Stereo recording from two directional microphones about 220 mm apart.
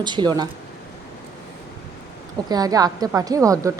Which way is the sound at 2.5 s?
15° right (ahead or behind).